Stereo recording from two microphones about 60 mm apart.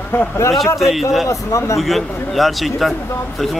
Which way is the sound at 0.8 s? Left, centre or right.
Centre.